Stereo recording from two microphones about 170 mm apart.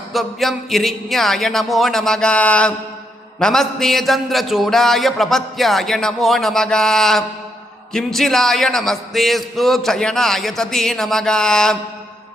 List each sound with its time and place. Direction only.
0.1 s a man's voice: centre (ahead or behind)